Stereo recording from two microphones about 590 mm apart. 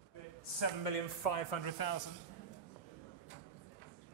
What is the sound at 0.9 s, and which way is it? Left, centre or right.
Speech, left.